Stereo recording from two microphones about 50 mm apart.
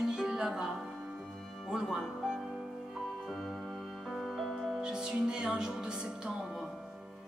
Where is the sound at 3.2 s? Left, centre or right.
Centre.